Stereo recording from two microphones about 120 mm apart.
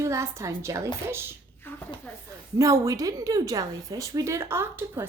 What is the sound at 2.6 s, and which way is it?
A woman's voice, 30° right (ahead or behind).